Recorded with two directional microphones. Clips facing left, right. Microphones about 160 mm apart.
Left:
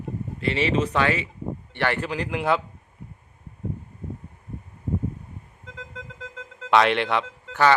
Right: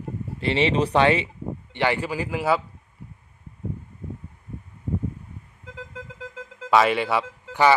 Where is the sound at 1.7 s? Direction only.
15° right (ahead or behind).